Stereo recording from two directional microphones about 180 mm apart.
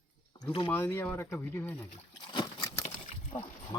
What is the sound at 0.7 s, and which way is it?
Speech, 10° left (ahead or behind).